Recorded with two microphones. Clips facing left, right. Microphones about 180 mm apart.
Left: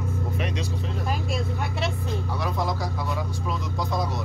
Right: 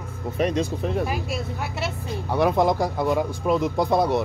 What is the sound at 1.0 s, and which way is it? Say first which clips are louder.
Speech: right 1 dB; 5° right (ahead or behind).